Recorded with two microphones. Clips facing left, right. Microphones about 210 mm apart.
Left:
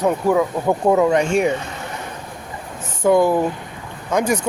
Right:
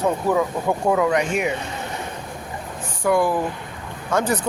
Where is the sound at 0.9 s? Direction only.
25° left (ahead or behind).